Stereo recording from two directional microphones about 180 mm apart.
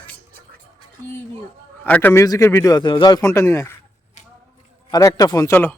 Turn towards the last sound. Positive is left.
turn(degrees=15)  # may be behind; listen again after turning